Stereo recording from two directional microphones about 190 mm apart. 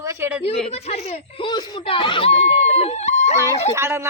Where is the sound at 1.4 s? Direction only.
25° left (ahead or behind).